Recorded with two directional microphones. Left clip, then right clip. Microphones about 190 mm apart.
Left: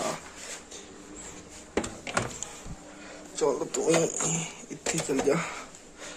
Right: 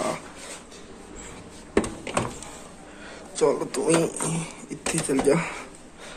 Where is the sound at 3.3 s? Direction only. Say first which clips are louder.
Right 5 dB; centre (ahead or behind).